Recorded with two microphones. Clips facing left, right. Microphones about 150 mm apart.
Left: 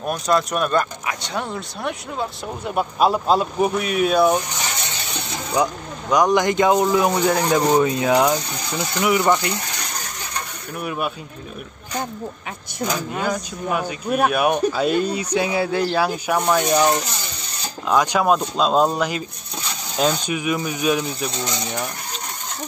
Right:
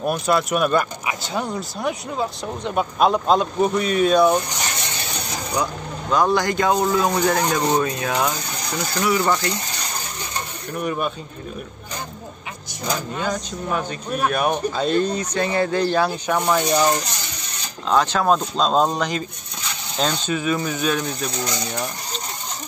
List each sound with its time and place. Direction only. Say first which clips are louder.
0.0 s speech: even; 5° right (ahead or behind)
5.6 s speech: left 5 dB; 15° left (ahead or behind)
10.8 s speech: right 2 dB; 5° left (ahead or behind)
12.9 s speech: even; 10° left (ahead or behind)